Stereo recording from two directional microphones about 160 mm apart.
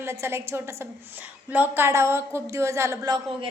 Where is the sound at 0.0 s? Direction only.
15° right (ahead or behind).